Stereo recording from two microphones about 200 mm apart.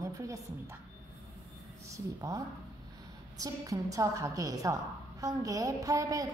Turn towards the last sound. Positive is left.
turn(degrees=-15)  # may be behind; listen again after turning